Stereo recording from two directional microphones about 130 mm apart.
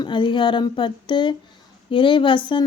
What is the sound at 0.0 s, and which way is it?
A woman's voice, 40° left (ahead or behind).